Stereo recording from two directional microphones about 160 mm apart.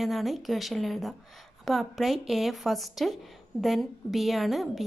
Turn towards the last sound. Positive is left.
turn(degrees=0)  # may be behind; listen again after turning